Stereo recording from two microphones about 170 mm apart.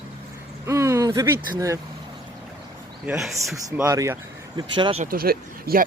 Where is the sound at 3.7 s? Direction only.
20° right (ahead or behind).